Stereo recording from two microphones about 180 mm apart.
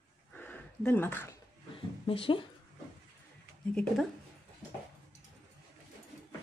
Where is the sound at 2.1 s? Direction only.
30° left (ahead or behind).